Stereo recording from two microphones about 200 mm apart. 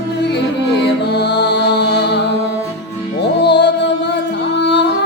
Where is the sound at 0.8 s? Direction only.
55° left (ahead or behind).